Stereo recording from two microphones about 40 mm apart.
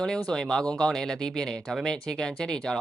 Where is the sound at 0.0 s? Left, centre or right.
Centre.